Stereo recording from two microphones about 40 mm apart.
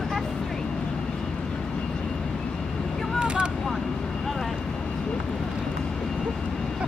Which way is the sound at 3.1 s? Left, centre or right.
Right.